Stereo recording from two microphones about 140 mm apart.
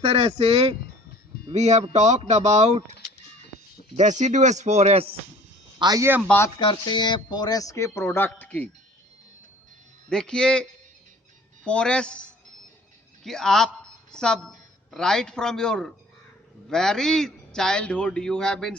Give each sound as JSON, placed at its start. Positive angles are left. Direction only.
{"t": 0.0, "sound": "a man's voice", "side_deg": -45}
{"t": 3.9, "sound": "speech", "side_deg": -55}
{"t": 5.8, "sound": "speech", "side_deg": -25}
{"t": 6.2, "sound": "speech", "side_deg": 15}
{"t": 6.6, "sound": "speech", "side_deg": 35}
{"t": 10.1, "sound": "a man's voice", "side_deg": 5}
{"t": 13.2, "sound": "a man's voice", "side_deg": 5}